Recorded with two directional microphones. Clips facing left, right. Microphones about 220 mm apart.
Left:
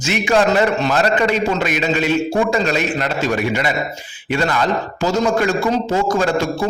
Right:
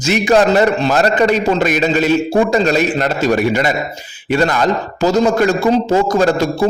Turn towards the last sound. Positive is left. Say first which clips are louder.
# right 4 dB
turn(degrees=-40)  # may be behind; listen again after turning